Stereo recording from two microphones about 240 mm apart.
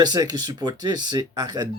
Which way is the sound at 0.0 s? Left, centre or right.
Centre.